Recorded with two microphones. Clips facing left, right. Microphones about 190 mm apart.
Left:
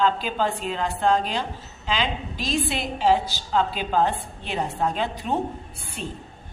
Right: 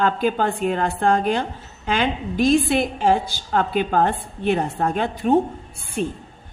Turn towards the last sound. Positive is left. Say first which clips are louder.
# right 9 dB
turn(degrees=-55)  # may be behind; listen again after turning